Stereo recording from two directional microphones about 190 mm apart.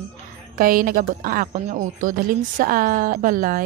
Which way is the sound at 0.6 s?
45° right (ahead or behind).